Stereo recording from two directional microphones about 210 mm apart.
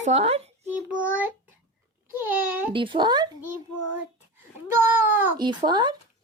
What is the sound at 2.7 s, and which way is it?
Speech, 25° right (ahead or behind).